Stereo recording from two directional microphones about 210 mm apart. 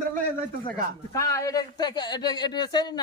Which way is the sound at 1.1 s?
15° left (ahead or behind).